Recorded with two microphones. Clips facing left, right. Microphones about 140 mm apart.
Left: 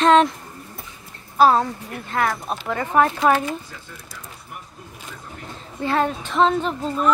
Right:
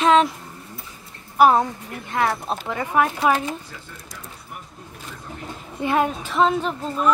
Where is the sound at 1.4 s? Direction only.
15° right (ahead or behind).